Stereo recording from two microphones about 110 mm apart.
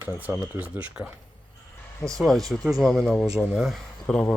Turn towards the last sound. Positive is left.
turn(degrees=5)  # may be behind; listen again after turning